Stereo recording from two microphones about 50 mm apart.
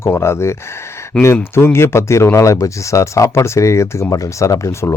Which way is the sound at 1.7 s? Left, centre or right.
Left.